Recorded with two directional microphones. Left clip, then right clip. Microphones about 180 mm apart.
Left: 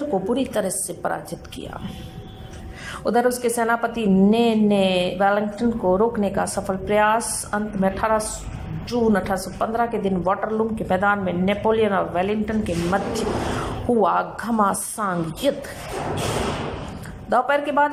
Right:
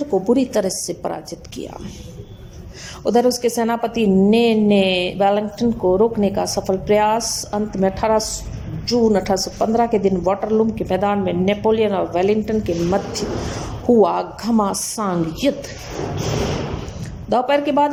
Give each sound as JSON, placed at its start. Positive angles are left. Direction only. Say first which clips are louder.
{"t": 0.1, "sound": "a woman's voice", "louder": "right 7 dB", "side_deg": -20}
{"t": 3.0, "sound": "a woman's voice", "louder": "right 4 dB", "side_deg": -20}
{"t": 17.2, "sound": "a woman's voice", "louder": "right 3 dB", "side_deg": -20}